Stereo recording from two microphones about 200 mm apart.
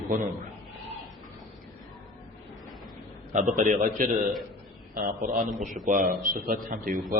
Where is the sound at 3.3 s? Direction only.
40° right (ahead or behind).